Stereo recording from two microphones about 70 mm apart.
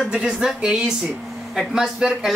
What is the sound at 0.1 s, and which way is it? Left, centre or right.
A man's voice, centre.